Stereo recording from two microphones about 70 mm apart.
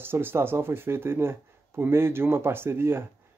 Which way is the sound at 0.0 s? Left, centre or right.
Right.